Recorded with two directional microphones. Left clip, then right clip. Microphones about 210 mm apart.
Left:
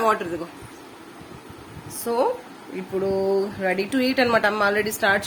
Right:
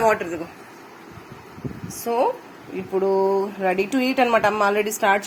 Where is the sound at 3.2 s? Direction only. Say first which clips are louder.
Right 2 dB; 5° right (ahead or behind).